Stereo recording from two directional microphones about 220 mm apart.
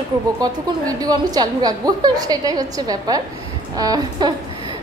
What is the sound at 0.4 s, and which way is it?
A woman's voice, 15° right (ahead or behind).